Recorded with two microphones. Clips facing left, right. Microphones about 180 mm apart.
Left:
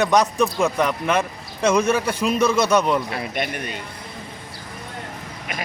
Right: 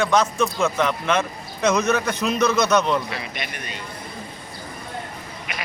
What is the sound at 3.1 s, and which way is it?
Speech, 50° left (ahead or behind).